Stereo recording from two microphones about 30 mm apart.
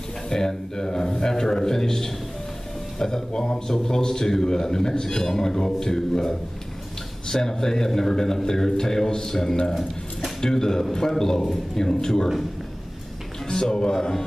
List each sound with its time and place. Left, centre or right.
0.3 s a man's voice: centre
13.5 s a man's voice: left